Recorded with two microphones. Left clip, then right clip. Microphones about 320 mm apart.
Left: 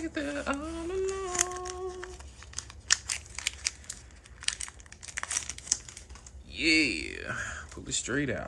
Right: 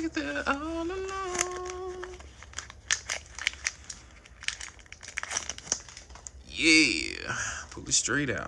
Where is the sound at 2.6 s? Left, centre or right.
Centre.